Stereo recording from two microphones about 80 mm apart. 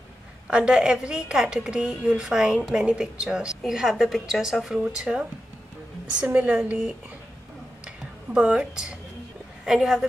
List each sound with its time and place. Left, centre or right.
0.5 s a woman's voice: centre
6.2 s a woman's voice: right
7.8 s a sound: centre
9.7 s a woman's voice: centre